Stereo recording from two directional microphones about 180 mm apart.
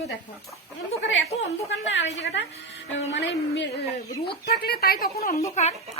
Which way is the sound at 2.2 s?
85° left.